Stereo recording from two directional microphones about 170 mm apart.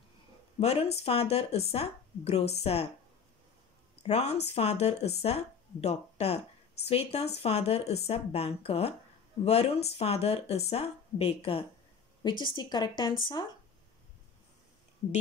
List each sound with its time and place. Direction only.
0.6 s speech: 40° left (ahead or behind)
4.1 s a woman's voice: 40° left (ahead or behind)